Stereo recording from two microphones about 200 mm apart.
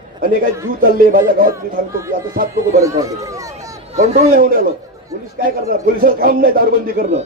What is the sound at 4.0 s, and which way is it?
A man's voice, 35° right (ahead or behind).